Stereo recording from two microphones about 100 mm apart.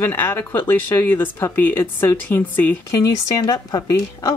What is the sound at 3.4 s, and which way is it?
Speech, 40° left (ahead or behind).